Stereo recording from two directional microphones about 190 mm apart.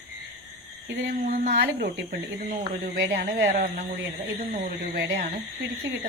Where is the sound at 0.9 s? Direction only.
50° right (ahead or behind).